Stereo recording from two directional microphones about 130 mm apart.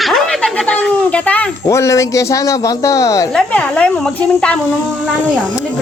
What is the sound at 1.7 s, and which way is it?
Speech, 25° left (ahead or behind).